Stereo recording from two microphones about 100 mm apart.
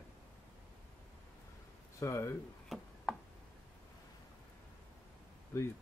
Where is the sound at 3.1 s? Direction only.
Centre (ahead or behind).